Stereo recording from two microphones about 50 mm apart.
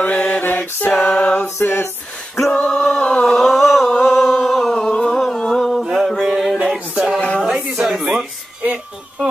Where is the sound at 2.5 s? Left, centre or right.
Centre.